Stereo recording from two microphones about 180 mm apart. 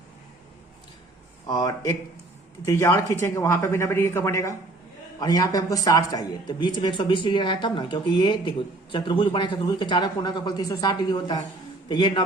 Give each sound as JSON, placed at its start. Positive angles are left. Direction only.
{"t": 1.5, "sound": "speech", "side_deg": 20}